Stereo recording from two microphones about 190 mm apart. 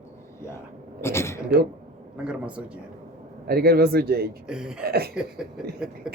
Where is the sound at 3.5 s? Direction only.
55° right (ahead or behind).